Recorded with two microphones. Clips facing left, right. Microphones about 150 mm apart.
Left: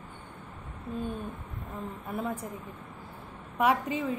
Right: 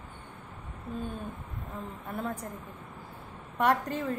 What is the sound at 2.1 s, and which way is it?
Speech, 5° left (ahead or behind).